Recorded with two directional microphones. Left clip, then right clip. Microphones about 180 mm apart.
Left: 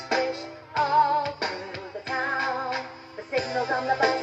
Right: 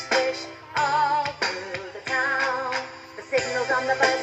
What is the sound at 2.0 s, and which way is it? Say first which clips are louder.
Music: right 3 dB; 25° left (ahead or behind).